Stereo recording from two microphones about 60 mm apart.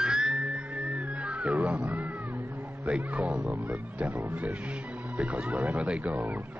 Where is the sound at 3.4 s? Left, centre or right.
Right.